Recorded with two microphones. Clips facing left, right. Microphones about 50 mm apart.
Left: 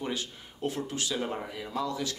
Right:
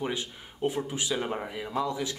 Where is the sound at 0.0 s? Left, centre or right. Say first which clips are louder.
Right 2 dB; centre.